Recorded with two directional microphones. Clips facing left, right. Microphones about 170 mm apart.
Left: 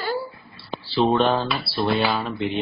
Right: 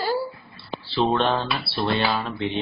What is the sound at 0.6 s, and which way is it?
Speech, centre (ahead or behind).